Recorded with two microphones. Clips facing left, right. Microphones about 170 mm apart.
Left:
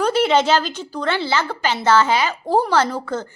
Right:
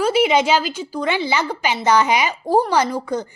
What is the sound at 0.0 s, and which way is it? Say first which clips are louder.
A woman's voice: even; 10° right (ahead or behind).